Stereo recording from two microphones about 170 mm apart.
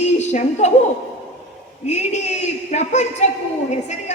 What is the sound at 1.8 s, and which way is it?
A woman's voice, 40° left (ahead or behind).